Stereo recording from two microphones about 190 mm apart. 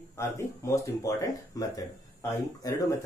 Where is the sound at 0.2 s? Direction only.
15° left (ahead or behind).